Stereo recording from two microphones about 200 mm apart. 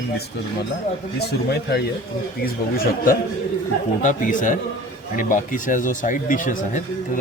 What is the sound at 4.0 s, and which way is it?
Speech, 40° left (ahead or behind).